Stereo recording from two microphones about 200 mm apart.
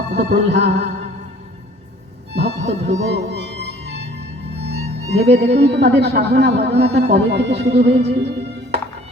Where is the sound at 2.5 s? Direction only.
35° right (ahead or behind).